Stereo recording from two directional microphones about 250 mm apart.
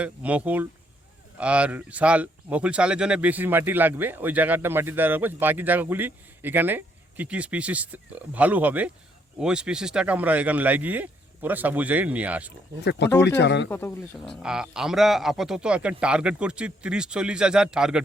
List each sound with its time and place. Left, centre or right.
0.0 s a man's voice: centre
12.8 s speech: left
13.7 s speech: centre
14.4 s a man's voice: centre